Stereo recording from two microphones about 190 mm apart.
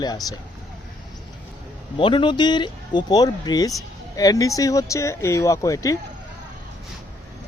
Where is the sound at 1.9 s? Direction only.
25° left (ahead or behind).